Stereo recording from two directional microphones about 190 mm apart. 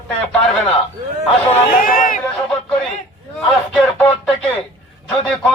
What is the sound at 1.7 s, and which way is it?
Speech, 45° left (ahead or behind).